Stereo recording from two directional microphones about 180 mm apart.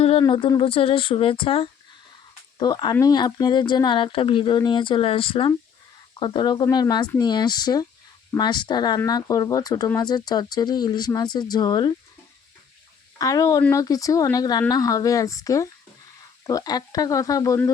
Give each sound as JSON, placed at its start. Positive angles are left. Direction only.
{"t": 0.2, "sound": "speech", "side_deg": 25}
{"t": 13.1, "sound": "speech", "side_deg": 20}